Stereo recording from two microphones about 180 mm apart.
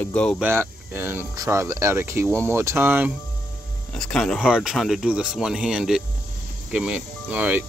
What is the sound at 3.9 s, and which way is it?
Speech, 5° left (ahead or behind).